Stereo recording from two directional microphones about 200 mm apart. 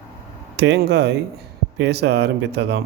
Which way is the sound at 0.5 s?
60° right (ahead or behind).